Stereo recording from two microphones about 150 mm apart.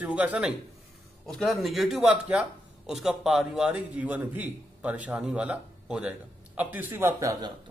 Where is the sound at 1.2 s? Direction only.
Centre (ahead or behind).